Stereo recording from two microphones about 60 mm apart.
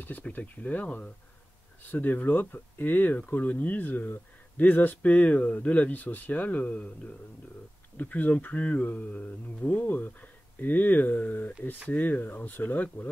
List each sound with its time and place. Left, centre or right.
0.0 s speech: left